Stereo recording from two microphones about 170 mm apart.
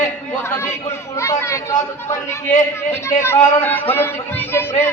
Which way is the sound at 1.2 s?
15° left (ahead or behind).